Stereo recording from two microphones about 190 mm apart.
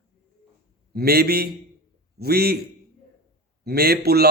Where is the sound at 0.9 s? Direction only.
55° right (ahead or behind).